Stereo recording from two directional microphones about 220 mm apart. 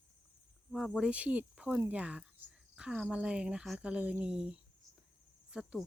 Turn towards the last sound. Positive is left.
turn(degrees=-5)  # may be behind; listen again after turning